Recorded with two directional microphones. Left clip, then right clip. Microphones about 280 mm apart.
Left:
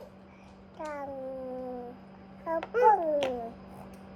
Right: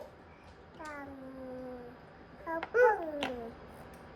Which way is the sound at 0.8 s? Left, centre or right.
Left.